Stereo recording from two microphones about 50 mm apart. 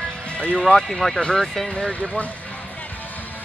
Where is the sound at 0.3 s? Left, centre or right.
Left.